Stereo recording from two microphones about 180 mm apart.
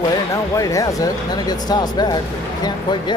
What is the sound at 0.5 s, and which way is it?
Speech, 20° left (ahead or behind).